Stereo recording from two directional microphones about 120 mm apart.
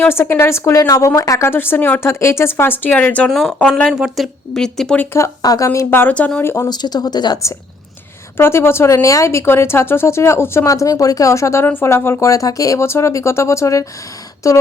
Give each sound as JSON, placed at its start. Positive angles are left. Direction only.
{"t": 0.0, "sound": "speech", "side_deg": 20}
{"t": 5.1, "sound": "speech", "side_deg": 30}
{"t": 6.7, "sound": "speech", "side_deg": 35}
{"t": 8.4, "sound": "speech", "side_deg": 20}